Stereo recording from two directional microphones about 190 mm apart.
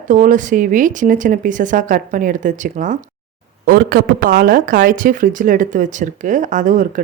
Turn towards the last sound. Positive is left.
turn(degrees=-40)  # may be behind; listen again after turning